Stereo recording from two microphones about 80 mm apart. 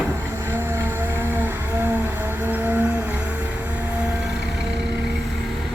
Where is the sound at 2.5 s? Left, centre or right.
Right.